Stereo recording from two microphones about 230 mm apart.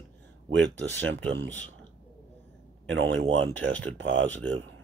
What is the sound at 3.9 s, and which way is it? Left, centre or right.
Speech, right.